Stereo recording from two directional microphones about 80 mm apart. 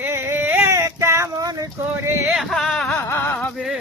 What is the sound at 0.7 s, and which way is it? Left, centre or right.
Female singing, right.